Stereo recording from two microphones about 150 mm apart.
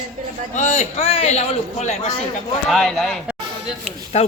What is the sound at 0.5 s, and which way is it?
A man's voice, 50° left (ahead or behind).